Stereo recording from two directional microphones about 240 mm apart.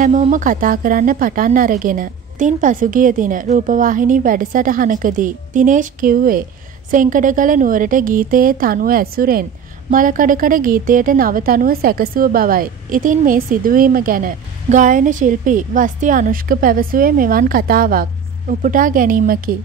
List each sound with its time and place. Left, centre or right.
0.0 s a woman's voice: right